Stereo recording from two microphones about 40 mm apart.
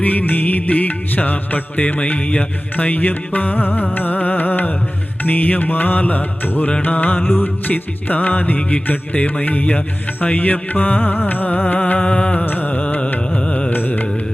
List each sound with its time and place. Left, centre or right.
0.0 s music: left
2.1 s mantra: left
2.7 s music: left
11.9 s music: left
12.5 s music: left
12.7 s music: left
13.7 s music: left